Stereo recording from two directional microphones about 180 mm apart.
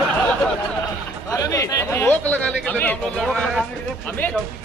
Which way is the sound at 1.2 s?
20° left (ahead or behind).